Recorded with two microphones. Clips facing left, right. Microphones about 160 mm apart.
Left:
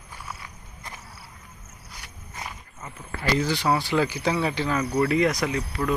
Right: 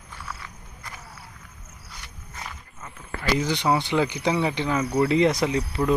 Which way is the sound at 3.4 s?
20° right (ahead or behind).